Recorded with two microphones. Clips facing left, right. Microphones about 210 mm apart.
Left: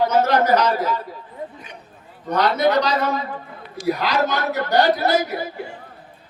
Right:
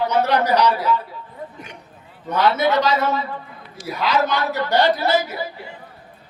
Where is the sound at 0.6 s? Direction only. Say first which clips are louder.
Right 2 dB; 40° left (ahead or behind).